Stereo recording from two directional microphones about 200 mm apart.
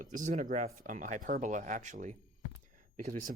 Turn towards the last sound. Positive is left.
turn(degrees=-40)  # may be behind; listen again after turning